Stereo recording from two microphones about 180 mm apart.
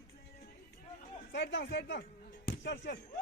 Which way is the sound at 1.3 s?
80° left.